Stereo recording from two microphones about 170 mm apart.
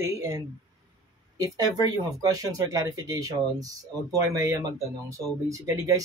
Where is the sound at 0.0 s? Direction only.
20° right (ahead or behind).